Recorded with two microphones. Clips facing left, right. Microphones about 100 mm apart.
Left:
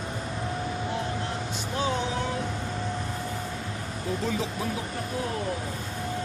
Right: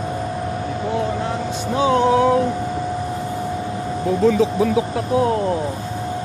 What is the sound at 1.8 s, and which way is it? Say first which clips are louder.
Music: right 13 dB; 80° right.